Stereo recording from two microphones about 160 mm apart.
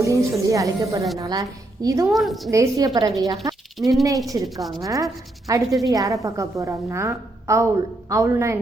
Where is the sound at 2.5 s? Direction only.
20° right (ahead or behind).